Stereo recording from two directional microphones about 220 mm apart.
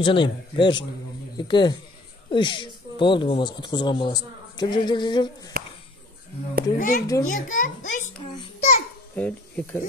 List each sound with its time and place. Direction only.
0.0 s speech: 20° left (ahead or behind)
5.5 s a sound: 40° right (ahead or behind)
6.8 s a child's voice: 40° left (ahead or behind)
8.4 s babbling: 30° left (ahead or behind)
9.1 s speech: 5° left (ahead or behind)